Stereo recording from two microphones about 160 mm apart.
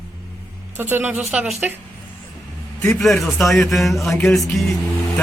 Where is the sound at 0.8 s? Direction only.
15° right (ahead or behind).